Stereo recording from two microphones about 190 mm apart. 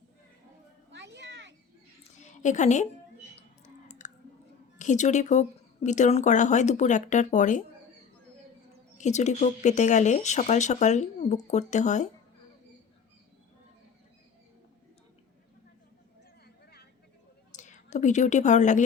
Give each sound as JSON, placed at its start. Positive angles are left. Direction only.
{"t": 0.9, "sound": "children playing", "side_deg": -70}
{"t": 2.1, "sound": "a sound", "side_deg": 40}
{"t": 3.3, "sound": "chewing", "side_deg": 40}
{"t": 4.8, "sound": "speech", "side_deg": 40}
{"t": 9.0, "sound": "speech", "side_deg": 40}
{"t": 17.5, "sound": "speech", "side_deg": 40}